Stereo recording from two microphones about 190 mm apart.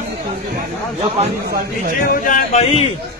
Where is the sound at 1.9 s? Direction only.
45° left (ahead or behind).